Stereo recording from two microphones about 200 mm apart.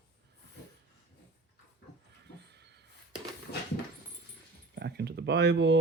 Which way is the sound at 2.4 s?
60° right (ahead or behind).